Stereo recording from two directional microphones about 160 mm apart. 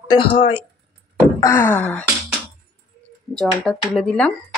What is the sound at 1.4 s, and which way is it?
Wail, 15° left (ahead or behind).